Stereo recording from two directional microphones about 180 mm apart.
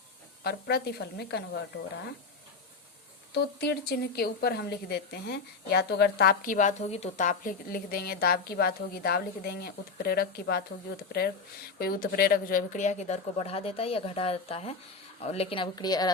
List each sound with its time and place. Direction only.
0.4 s speech: 60° left (ahead or behind)
3.3 s speech: 65° left (ahead or behind)
11.8 s a woman's voice: 55° left (ahead or behind); by 16.1 s 20° left (ahead or behind)